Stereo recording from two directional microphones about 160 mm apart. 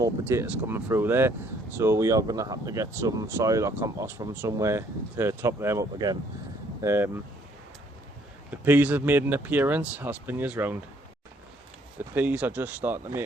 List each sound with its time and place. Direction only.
0.0 s speech: 15° right (ahead or behind)
8.4 s speech: 10° right (ahead or behind)
11.9 s speech: 10° right (ahead or behind)